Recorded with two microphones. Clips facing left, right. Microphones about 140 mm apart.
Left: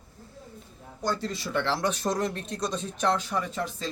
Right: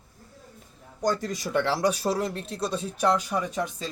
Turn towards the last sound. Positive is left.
turn(degrees=-15)  # may be behind; listen again after turning